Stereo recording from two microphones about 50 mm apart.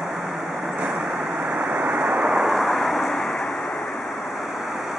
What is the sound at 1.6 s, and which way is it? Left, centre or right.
Waves, right.